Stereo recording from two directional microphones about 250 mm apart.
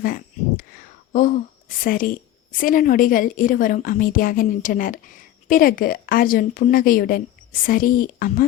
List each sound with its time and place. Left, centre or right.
0.0 s a woman's voice: left